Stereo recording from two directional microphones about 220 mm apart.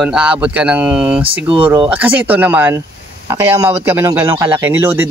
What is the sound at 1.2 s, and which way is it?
Speech, 25° right (ahead or behind).